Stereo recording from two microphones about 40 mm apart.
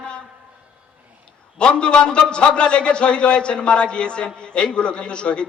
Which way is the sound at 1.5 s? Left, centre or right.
Left.